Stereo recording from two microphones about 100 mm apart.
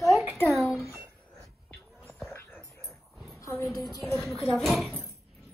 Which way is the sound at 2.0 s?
15° left (ahead or behind).